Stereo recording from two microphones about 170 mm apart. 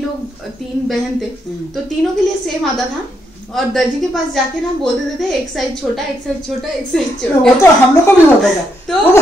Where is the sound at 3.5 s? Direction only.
Centre (ahead or behind).